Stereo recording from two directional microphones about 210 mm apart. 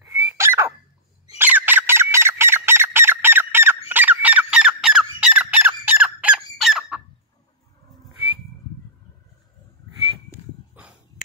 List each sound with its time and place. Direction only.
0.0 s a sound: 10° right (ahead or behind)
1.4 s fowl: 10° right (ahead or behind)
3.9 s squawk: 10° right (ahead or behind)
10.7 s dog: 5° right (ahead or behind)